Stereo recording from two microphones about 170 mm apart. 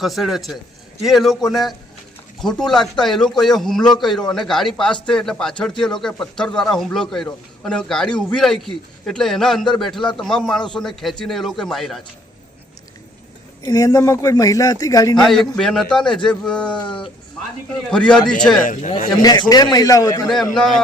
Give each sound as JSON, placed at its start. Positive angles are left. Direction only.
{"t": 0.0, "sound": "a man's voice", "side_deg": 0}
{"t": 13.6, "sound": "a man's voice", "side_deg": 20}
{"t": 15.5, "sound": "a man's voice", "side_deg": 5}
{"t": 17.9, "sound": "a man's voice", "side_deg": 5}
{"t": 18.6, "sound": "a man's voice", "side_deg": 50}
{"t": 19.1, "sound": "a man's voice", "side_deg": 25}
{"t": 20.2, "sound": "a man's voice", "side_deg": 0}